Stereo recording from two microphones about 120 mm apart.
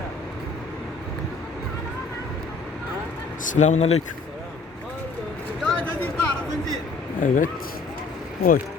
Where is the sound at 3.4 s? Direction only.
85° left; by 4.0 s 70° left (ahead or behind).